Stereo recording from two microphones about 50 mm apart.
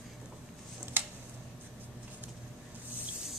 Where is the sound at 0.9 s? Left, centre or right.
Right.